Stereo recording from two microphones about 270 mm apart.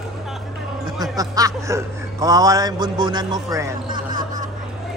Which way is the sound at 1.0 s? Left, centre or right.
Centre.